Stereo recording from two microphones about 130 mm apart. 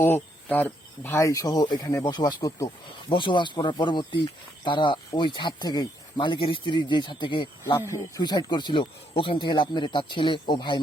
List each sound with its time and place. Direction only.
0.0 s speech: 15° left (ahead or behind); by 7.4 s 40° left (ahead or behind)
7.6 s speech: 20° left (ahead or behind)